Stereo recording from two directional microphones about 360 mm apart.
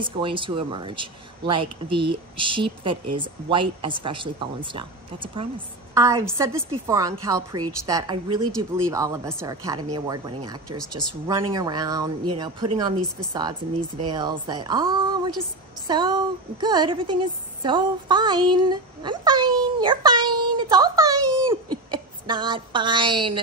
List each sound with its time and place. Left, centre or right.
0.0 s speech: centre
10.9 s speech: right
11.2 s a woman's voice: centre